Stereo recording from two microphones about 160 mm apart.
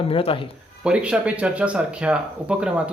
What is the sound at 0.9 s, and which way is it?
Speech, 5° right (ahead or behind).